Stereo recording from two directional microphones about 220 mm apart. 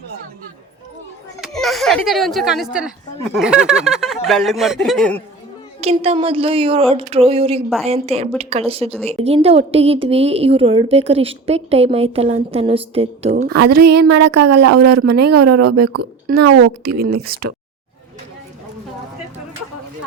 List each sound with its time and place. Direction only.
1.4 s a woman's voice: centre (ahead or behind)
5.8 s a woman's voice: 25° right (ahead or behind)
13.3 s speech: 45° right (ahead or behind)
14.6 s a woman's voice: 90° right
16.8 s speech: 45° right (ahead or behind)